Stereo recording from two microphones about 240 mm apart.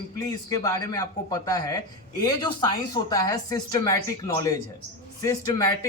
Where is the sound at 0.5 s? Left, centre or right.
Centre.